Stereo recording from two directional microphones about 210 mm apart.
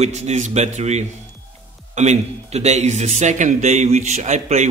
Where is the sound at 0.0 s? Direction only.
30° right (ahead or behind).